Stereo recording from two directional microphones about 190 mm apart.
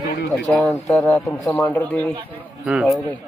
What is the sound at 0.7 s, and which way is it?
Speech, 15° left (ahead or behind).